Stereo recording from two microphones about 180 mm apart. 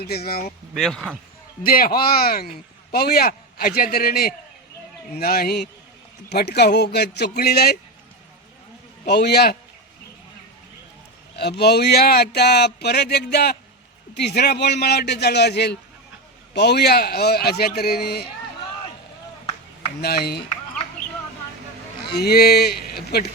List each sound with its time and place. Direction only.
0.0 s speech: 60° left (ahead or behind)
0.8 s speech: centre (ahead or behind)
1.6 s speech: 55° left (ahead or behind)
9.0 s speech: 65° left (ahead or behind)
11.3 s speech: 65° left (ahead or behind)
20.0 s speech: 60° left (ahead or behind)
22.1 s speech: 60° left (ahead or behind)